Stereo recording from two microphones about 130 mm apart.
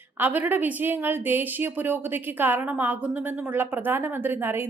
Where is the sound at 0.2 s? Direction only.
15° right (ahead or behind).